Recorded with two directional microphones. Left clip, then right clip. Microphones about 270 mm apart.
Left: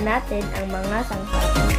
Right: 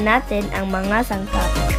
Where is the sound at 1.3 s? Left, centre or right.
Centre.